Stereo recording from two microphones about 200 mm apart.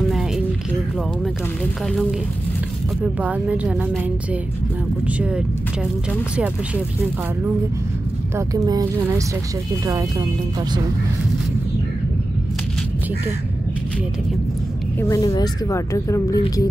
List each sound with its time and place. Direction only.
1.2 s a woman's voice: centre (ahead or behind)
8.4 s a woman's voice: 15° right (ahead or behind)
9.8 s a woman's voice: 15° right (ahead or behind)
15.0 s speech: 15° left (ahead or behind)